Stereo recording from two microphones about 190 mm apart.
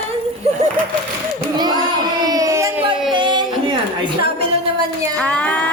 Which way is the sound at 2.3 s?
20° right (ahead or behind).